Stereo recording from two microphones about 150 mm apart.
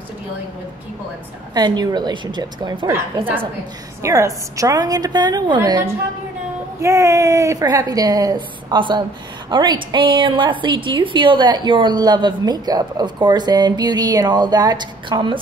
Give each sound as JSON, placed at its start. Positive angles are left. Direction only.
{"t": 1.5, "sound": "a woman's voice", "side_deg": -25}
{"t": 4.0, "sound": "a woman's voice", "side_deg": -20}